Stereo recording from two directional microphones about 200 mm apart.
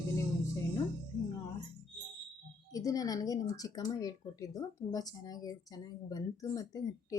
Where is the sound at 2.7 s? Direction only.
20° left (ahead or behind).